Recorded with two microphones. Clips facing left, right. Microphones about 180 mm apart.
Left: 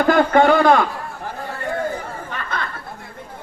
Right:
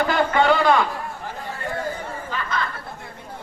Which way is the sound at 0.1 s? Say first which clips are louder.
Left 8 dB; 50° left (ahead or behind).